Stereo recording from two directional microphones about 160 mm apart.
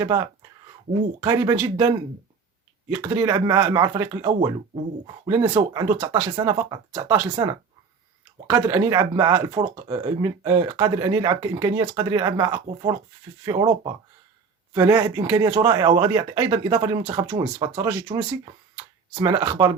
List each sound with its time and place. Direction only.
1.2 s speech: 25° right (ahead or behind)
2.9 s speech: 20° right (ahead or behind)